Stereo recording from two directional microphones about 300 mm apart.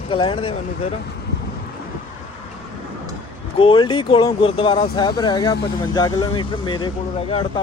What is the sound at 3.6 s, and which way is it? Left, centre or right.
Speech, centre.